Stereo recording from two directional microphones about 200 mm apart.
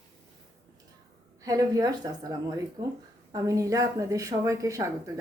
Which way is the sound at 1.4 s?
15° right (ahead or behind).